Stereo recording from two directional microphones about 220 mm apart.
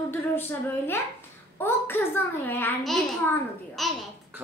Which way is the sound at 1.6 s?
10° left (ahead or behind).